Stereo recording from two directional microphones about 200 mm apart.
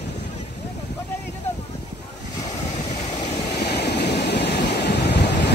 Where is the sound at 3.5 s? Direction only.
55° left (ahead or behind).